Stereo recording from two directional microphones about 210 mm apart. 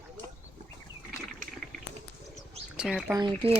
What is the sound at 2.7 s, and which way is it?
Speech, 5° right (ahead or behind).